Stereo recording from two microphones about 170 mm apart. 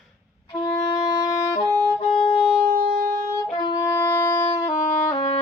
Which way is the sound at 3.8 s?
15° left (ahead or behind).